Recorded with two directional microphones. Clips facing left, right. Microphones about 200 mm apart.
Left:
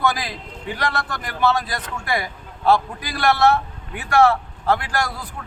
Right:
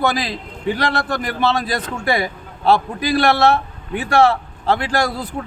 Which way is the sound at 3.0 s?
30° right (ahead or behind).